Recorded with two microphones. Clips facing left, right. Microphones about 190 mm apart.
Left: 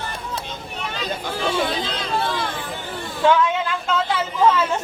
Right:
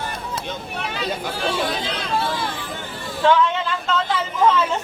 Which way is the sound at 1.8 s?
60° right (ahead or behind).